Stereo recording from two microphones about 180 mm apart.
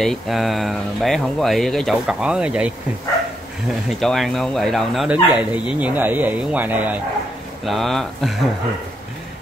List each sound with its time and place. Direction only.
0.0 s speech: centre (ahead or behind)
4.0 s speech: centre (ahead or behind)